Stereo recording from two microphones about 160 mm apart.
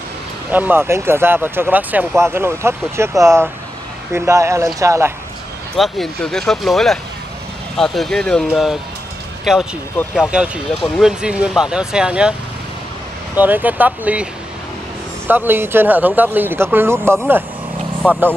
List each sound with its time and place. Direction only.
0.5 s speech: 10° right (ahead or behind)
5.8 s speech: centre (ahead or behind)
13.4 s speech: 10° right (ahead or behind)
15.2 s speech: 10° right (ahead or behind)